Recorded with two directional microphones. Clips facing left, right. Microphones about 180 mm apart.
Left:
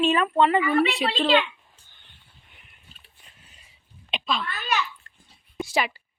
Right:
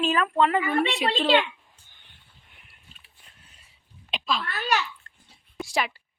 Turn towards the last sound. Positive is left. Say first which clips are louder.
# left 2 dB
turn(degrees=0)  # may be behind; listen again after turning